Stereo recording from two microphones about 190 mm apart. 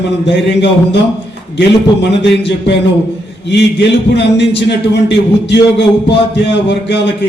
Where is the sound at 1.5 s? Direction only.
65° left (ahead or behind).